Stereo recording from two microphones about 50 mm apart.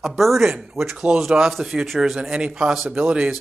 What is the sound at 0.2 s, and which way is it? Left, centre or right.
Speech, centre.